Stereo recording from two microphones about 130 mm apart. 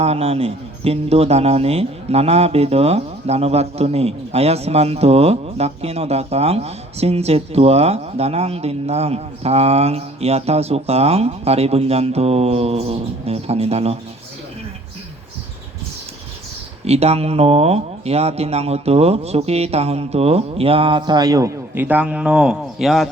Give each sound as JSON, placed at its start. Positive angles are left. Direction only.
{"t": 0.0, "sound": "speech", "side_deg": -50}
{"t": 16.8, "sound": "speech", "side_deg": -50}
{"t": 21.8, "sound": "speech", "side_deg": -10}